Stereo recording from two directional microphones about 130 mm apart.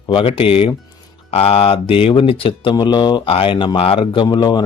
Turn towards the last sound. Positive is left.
turn(degrees=35)  # may be behind; listen again after turning